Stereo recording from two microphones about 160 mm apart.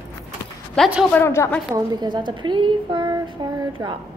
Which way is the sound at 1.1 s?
15° left (ahead or behind).